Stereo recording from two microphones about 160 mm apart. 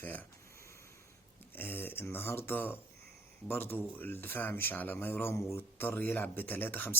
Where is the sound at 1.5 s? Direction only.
15° left (ahead or behind).